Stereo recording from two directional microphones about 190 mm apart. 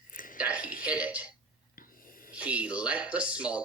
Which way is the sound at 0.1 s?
45° left (ahead or behind).